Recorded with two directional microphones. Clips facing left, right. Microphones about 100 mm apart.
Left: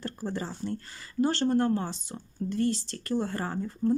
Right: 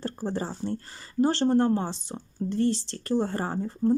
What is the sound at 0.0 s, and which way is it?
Speech, 30° right (ahead or behind).